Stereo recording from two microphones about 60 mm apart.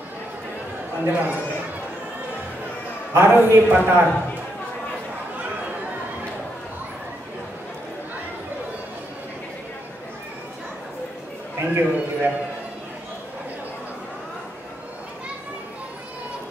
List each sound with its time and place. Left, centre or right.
1.0 s a man's voice: right
3.2 s a man's voice: right
11.6 s a man's voice: right